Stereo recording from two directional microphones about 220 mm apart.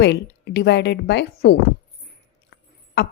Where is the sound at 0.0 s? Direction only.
50° left (ahead or behind).